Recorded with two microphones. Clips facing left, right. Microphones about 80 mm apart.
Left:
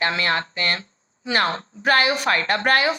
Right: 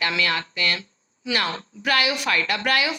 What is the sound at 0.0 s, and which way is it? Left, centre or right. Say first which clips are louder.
A woman's voice: left 2 dB; left.